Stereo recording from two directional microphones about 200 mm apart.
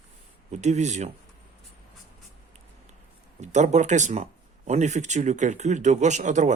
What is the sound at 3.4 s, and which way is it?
Speech, 35° right (ahead or behind).